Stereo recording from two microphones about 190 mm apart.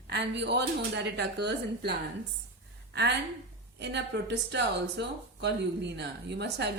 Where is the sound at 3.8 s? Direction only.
65° right (ahead or behind).